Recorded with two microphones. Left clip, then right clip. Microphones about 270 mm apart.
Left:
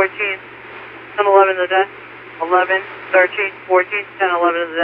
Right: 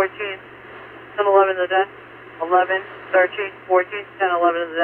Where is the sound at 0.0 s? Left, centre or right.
Centre.